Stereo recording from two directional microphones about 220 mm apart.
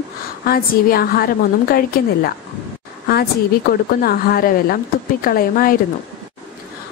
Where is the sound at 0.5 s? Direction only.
40° left (ahead or behind).